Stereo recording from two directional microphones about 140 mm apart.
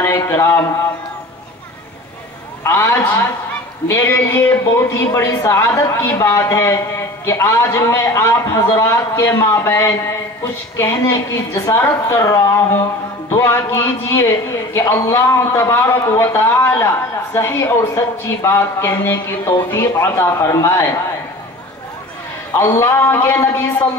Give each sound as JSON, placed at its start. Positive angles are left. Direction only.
{"t": 0.0, "sound": "a man's voice", "side_deg": 20}
{"t": 2.6, "sound": "a man's voice", "side_deg": 20}
{"t": 22.6, "sound": "a man's voice", "side_deg": 20}